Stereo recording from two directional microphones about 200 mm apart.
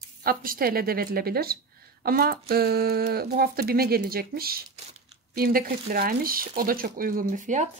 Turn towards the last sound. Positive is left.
turn(degrees=-40)  # may be behind; listen again after turning